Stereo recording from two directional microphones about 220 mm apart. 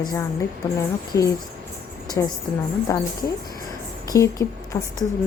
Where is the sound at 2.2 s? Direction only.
15° left (ahead or behind).